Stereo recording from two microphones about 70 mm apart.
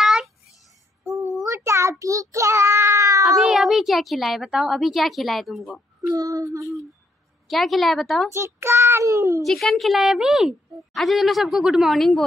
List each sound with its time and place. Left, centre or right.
0.0 s a sound: centre
1.2 s child singing: right
3.3 s a sound: centre
4.5 s a woman's voice: centre
6.0 s speech: right
7.4 s a woman's voice: centre
8.3 s a child's voice: right
9.4 s a woman's voice: centre